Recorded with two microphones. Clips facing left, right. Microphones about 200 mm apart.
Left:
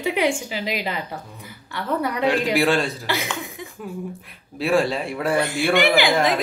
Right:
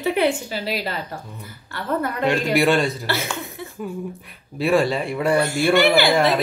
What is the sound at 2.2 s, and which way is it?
Speech, centre (ahead or behind).